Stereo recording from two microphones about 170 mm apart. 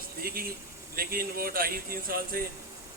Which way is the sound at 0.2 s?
60° right (ahead or behind).